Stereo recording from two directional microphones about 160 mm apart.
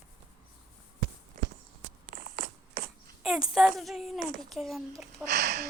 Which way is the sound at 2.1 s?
65° right (ahead or behind).